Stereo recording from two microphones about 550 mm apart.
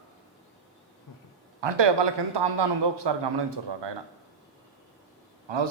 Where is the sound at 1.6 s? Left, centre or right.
Right.